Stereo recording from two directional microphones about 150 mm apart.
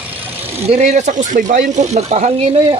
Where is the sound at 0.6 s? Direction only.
50° right (ahead or behind).